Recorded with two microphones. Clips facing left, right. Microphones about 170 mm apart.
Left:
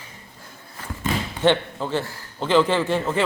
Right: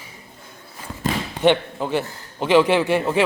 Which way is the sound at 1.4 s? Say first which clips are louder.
Right 2 dB; 15° right (ahead or behind).